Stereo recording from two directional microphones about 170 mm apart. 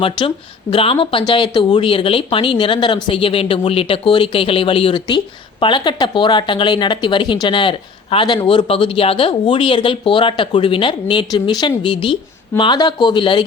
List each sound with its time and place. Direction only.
0.0 s speech: 30° left (ahead or behind)